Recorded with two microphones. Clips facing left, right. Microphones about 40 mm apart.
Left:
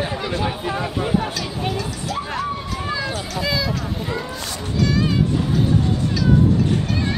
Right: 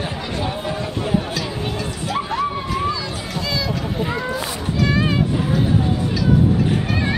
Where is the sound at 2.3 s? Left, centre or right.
Centre.